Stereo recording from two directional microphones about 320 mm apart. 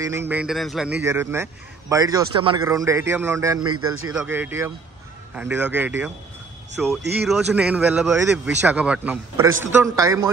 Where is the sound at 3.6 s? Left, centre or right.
Right.